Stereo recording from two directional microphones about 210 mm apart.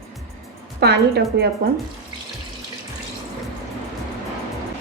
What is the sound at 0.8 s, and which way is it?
Speech, 50° right (ahead or behind).